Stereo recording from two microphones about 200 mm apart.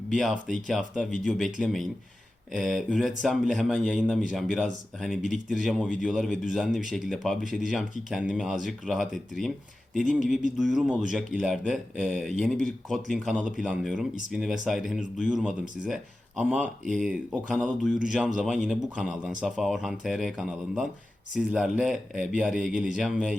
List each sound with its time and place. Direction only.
0.1 s speech: centre (ahead or behind)